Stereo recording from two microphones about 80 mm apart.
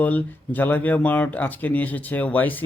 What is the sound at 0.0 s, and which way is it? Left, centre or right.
Speech, centre.